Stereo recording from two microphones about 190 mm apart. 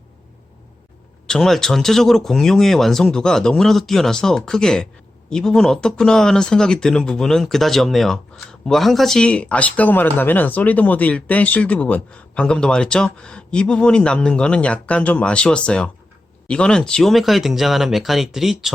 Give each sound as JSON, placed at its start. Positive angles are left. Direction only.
{"t": 1.3, "sound": "speech", "side_deg": 5}